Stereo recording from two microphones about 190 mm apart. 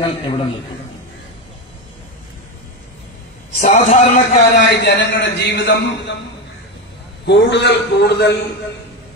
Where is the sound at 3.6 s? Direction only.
35° left (ahead or behind).